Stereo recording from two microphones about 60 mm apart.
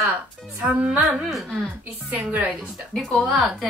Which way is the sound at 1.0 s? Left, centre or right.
Centre.